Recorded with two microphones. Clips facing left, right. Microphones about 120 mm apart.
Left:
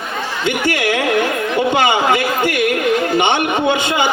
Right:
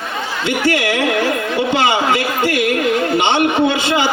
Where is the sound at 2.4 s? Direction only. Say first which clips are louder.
Even; 20° left (ahead or behind).